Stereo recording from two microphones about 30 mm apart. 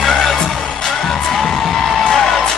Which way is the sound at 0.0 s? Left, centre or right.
Centre.